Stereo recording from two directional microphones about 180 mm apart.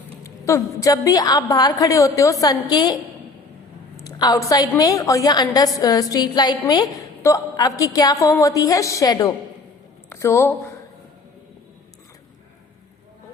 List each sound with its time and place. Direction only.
0.3 s a woman's voice: 15° left (ahead or behind)